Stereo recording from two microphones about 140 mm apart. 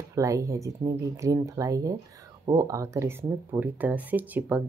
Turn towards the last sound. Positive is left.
turn(degrees=-10)  # may be behind; listen again after turning